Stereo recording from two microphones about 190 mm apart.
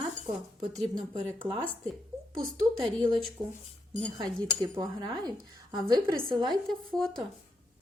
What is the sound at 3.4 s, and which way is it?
A woman's voice, 15° right (ahead or behind).